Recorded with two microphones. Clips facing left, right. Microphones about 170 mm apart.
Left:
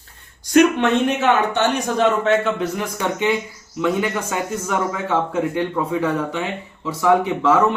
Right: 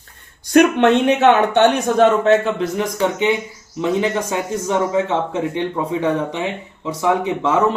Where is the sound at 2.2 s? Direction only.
35° right (ahead or behind); by 7.5 s 20° right (ahead or behind).